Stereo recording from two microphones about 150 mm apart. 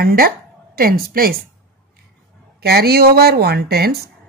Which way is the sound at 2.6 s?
90° right.